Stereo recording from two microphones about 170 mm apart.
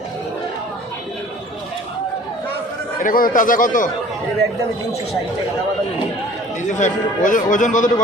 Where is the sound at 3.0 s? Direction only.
55° left (ahead or behind).